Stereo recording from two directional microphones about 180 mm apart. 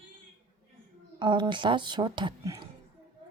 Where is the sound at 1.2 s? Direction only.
25° right (ahead or behind).